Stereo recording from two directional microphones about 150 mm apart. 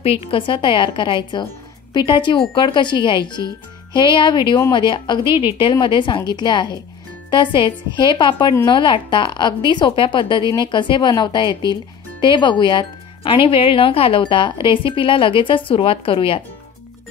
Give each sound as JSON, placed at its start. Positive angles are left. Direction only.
{"t": 0.0, "sound": "speech", "side_deg": 40}
{"t": 5.2, "sound": "a woman's voice", "side_deg": -15}
{"t": 5.6, "sound": "speech", "side_deg": 35}